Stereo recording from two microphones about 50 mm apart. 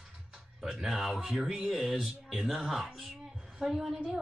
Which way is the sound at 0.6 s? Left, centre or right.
Centre.